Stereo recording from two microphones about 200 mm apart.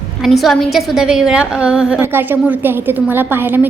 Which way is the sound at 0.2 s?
Centre (ahead or behind).